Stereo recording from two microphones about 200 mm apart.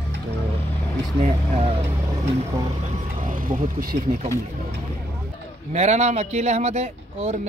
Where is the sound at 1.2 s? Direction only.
30° right (ahead or behind).